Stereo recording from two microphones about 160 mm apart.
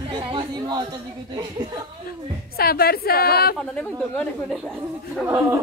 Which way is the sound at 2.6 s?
70° left (ahead or behind).